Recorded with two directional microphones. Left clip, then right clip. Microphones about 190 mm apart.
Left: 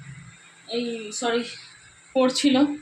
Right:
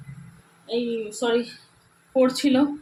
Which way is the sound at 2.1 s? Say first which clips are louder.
Even; 5° right (ahead or behind).